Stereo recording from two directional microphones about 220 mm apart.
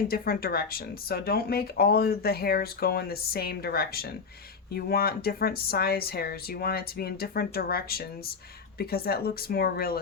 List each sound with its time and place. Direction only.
0.1 s speech: 45° left (ahead or behind)